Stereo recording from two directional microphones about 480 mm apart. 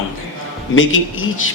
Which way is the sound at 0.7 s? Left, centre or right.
Left.